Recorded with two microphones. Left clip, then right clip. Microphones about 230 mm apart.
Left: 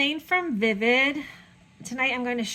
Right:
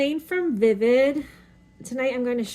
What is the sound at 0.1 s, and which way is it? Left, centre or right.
Speech, left.